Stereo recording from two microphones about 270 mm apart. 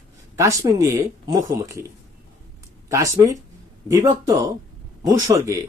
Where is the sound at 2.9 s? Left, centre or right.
Centre.